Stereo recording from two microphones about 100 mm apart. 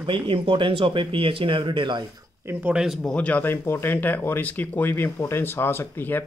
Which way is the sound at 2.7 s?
5° right (ahead or behind).